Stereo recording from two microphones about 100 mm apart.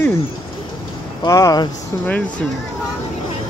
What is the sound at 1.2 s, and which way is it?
Speech, 40° left (ahead or behind).